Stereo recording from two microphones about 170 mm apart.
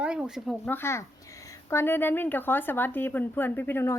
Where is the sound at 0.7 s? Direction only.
15° left (ahead or behind).